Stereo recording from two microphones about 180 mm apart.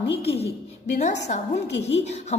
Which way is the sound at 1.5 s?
75° left (ahead or behind).